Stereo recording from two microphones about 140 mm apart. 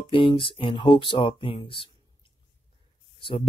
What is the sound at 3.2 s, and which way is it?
Speech, 40° left (ahead or behind).